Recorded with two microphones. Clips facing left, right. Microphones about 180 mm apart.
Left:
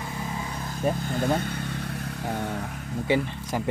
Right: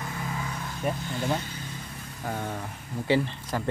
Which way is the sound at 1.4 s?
60° left (ahead or behind).